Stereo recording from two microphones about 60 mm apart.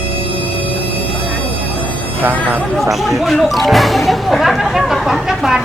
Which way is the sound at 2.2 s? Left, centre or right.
Right.